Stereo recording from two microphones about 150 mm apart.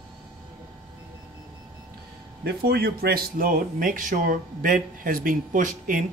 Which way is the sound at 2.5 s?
90° right.